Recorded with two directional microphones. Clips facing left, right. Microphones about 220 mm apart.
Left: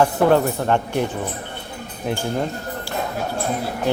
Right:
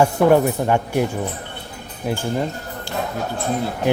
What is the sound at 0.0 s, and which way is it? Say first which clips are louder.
Speech: right 2 dB; 10° right (ahead or behind).